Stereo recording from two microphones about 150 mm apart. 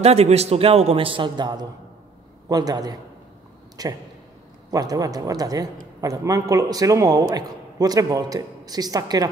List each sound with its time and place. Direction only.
0.0 s a man's voice: 45° right (ahead or behind); by 9.3 s 25° right (ahead or behind)